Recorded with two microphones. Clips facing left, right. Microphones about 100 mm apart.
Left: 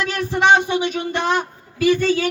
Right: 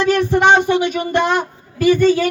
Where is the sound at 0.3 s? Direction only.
60° right (ahead or behind).